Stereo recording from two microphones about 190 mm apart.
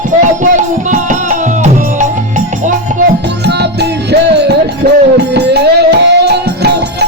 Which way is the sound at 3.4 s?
60° right (ahead or behind).